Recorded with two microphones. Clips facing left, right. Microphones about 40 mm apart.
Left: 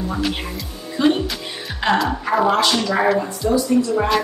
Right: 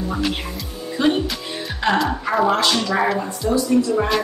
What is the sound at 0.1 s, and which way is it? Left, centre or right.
A woman's voice, centre.